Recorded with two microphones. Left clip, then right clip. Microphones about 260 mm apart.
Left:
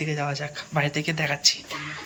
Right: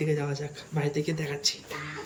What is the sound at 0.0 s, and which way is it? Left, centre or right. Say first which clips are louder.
Speech: left 2 dB; centre.